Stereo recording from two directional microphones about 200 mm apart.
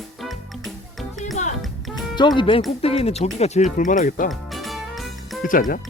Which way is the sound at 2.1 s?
20° left (ahead or behind).